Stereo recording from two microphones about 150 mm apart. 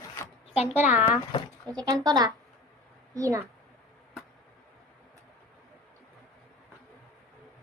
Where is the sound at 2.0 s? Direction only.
25° right (ahead or behind).